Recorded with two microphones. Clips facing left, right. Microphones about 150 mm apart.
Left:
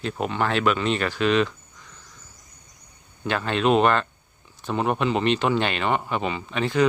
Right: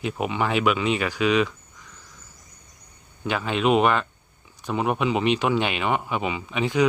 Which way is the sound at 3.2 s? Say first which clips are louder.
Even; 5° right (ahead or behind).